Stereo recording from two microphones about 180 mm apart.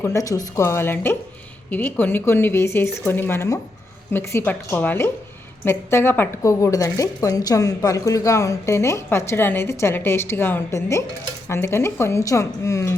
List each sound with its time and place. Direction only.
0.0 s speech: 20° left (ahead or behind)